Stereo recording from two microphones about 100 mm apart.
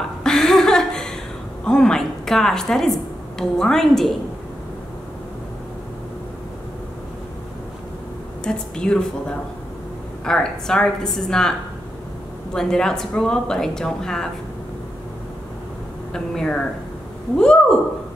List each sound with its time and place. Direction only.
0.2 s a sound: 5° left (ahead or behind)
1.6 s speech: 5° left (ahead or behind)
8.5 s a woman's voice: 5° left (ahead or behind)
12.5 s a woman's voice: 5° left (ahead or behind)
16.1 s a woman's voice: 10° left (ahead or behind)